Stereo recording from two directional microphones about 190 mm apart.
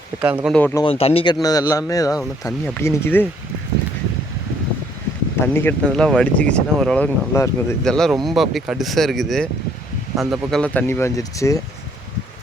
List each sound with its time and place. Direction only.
0.2 s speech: 10° right (ahead or behind)
0.5 s speech: 10° left (ahead or behind)
0.9 s speech: 30° left (ahead or behind); by 3.2 s 10° left (ahead or behind)
5.4 s speech: 10° left (ahead or behind)
7.9 s speech: 5° left (ahead or behind)